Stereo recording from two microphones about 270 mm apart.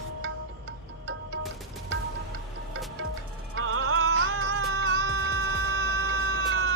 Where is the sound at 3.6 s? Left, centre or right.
Right.